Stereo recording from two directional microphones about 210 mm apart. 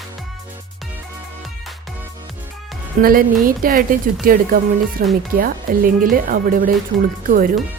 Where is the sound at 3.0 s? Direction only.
40° right (ahead or behind).